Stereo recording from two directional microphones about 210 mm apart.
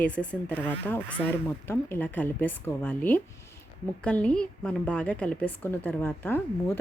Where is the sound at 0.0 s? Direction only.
5° left (ahead or behind).